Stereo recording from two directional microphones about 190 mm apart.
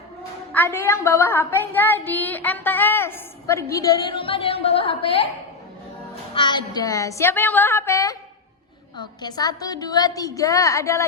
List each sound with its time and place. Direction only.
0.5 s a woman's voice: 10° left (ahead or behind); by 5.3 s 30° left (ahead or behind)
6.3 s a woman's voice: 25° left (ahead or behind)